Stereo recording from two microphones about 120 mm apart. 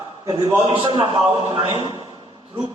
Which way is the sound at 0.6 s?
45° right (ahead or behind).